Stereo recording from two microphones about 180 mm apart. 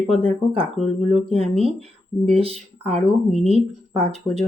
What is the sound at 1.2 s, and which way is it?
Speech, 35° right (ahead or behind).